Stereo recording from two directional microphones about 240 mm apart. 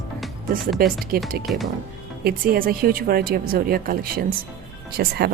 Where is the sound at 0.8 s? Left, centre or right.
Right.